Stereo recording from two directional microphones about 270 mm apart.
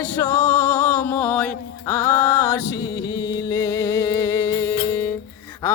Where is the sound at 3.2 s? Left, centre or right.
Centre.